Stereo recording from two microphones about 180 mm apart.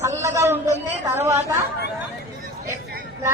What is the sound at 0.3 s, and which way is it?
A man's voice, 15° right (ahead or behind).